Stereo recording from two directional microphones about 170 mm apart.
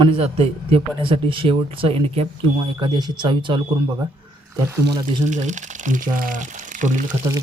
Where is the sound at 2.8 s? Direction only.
25° right (ahead or behind).